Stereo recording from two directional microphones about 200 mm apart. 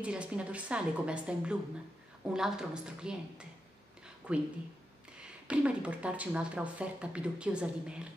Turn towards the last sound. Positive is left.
turn(degrees=-5)  # may be behind; listen again after turning